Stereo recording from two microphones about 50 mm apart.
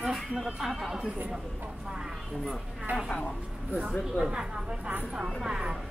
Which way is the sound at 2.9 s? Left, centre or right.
Right.